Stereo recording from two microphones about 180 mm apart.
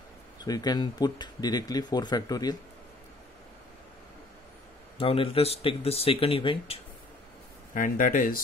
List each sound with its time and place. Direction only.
0.4 s speech: 20° left (ahead or behind)
4.9 s speech: 30° left (ahead or behind)
7.7 s speech: 50° left (ahead or behind)